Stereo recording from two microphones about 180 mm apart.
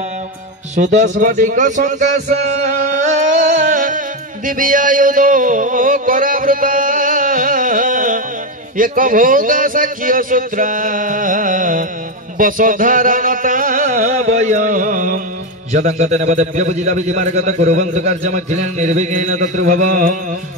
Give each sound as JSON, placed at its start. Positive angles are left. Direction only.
{"t": 0.7, "sound": "a man's voice", "side_deg": -40}
{"t": 4.5, "sound": "a sound", "side_deg": -50}
{"t": 8.7, "sound": "a man's voice", "side_deg": -50}